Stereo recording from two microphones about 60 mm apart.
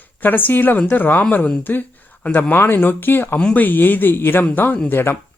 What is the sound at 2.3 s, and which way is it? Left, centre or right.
Speech, left.